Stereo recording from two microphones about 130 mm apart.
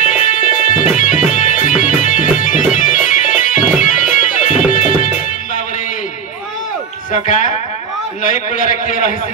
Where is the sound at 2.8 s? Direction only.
90° left.